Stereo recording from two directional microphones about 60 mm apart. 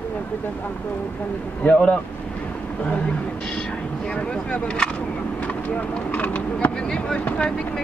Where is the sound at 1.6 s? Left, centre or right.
Left.